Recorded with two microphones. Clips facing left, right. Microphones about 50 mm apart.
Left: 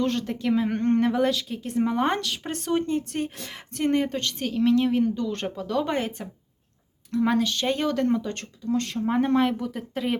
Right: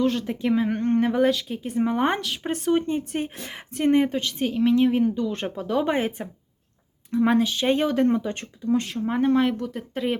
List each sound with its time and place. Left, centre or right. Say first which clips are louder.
0.0 s speech: right 2 dB; centre
8.9 s speech: right 1 dB; centre